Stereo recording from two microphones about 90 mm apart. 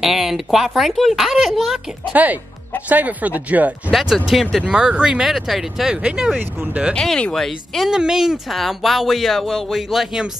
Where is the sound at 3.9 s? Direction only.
5° right (ahead or behind).